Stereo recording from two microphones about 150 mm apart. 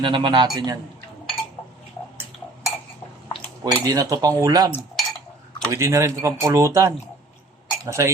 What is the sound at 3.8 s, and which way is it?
Speech, 20° right (ahead or behind).